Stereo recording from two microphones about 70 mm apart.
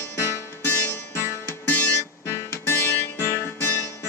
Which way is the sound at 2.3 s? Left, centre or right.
Left.